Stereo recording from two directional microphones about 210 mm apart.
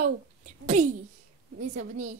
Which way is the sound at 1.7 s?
35° right (ahead or behind).